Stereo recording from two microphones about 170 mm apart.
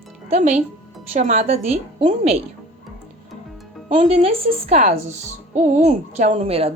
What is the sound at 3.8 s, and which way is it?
Speech, 40° right (ahead or behind).